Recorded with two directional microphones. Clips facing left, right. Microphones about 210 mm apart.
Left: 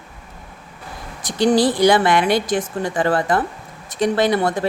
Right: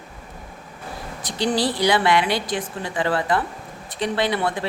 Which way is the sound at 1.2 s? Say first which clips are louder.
Left 7 dB; 50° left (ahead or behind).